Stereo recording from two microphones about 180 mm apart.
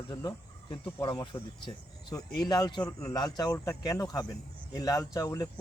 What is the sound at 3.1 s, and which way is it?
Speech, 20° left (ahead or behind).